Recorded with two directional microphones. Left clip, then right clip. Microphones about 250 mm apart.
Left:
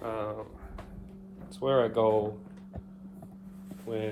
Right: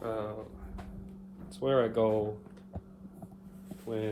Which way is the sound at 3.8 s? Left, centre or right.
Centre.